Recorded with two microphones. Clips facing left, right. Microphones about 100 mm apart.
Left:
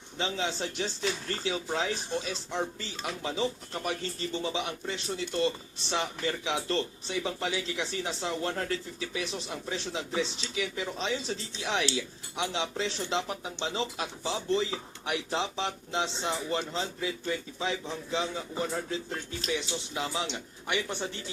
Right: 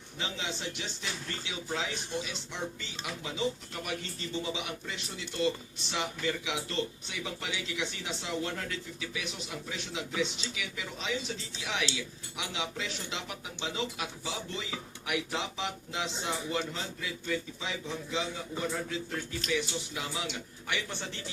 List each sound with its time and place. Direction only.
0.2 s a man's voice: 35° left (ahead or behind); by 21.1 s 20° left (ahead or behind)